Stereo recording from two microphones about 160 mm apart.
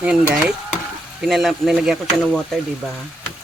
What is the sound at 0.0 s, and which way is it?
Speech, 5° right (ahead or behind).